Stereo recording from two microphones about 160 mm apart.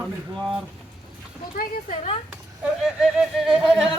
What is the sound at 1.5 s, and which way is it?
Speech, 50° left (ahead or behind).